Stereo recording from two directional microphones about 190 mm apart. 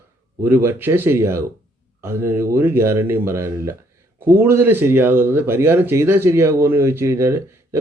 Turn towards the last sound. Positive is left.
turn(degrees=-15)  # may be behind; listen again after turning